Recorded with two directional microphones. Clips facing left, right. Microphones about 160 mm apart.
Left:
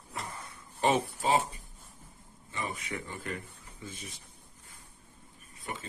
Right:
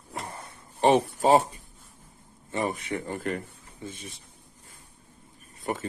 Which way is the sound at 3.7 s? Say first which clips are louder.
Right 5 dB; 25° right (ahead or behind).